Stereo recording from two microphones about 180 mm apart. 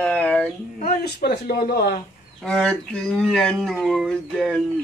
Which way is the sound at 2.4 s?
5° left (ahead or behind).